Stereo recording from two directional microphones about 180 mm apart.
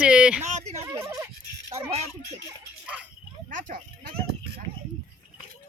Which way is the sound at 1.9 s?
40° right (ahead or behind).